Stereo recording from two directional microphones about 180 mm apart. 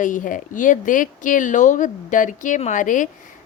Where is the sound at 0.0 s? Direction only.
45° left (ahead or behind).